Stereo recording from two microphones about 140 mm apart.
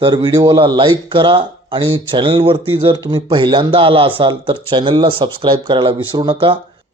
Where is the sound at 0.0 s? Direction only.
35° right (ahead or behind).